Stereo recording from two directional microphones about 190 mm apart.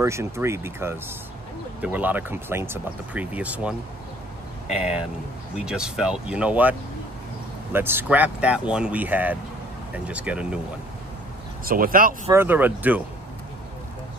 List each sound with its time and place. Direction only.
0.0 s speech: 15° right (ahead or behind)
5.7 s speech: 5° right (ahead or behind)
11.6 s speech: 50° right (ahead or behind)
12.3 s speech: 10° right (ahead or behind)